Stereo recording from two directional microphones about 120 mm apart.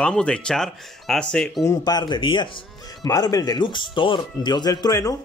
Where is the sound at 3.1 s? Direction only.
30° left (ahead or behind).